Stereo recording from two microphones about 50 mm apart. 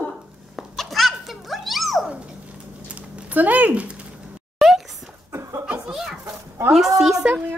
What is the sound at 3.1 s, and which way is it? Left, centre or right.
Speech, right.